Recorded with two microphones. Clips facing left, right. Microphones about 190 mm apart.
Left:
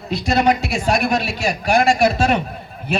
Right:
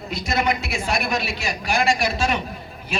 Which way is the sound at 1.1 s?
50° left (ahead or behind).